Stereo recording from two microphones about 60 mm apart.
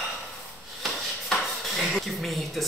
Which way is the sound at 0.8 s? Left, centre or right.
Centre.